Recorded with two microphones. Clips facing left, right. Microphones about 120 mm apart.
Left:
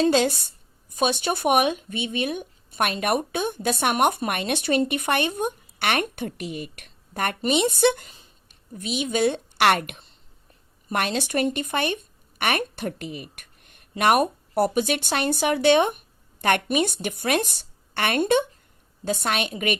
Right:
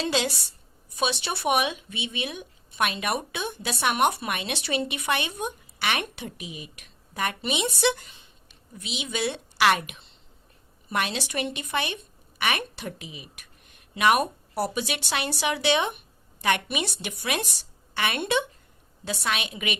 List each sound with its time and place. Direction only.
0.0 s a woman's voice: 50° left (ahead or behind)